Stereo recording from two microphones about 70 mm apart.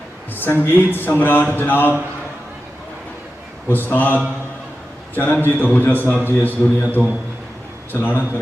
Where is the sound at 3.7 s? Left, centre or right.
Left.